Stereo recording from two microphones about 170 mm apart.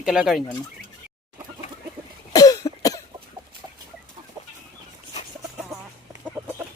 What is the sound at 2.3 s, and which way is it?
Cough, 20° left (ahead or behind).